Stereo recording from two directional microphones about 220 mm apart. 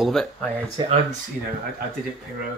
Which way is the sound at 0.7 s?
25° right (ahead or behind).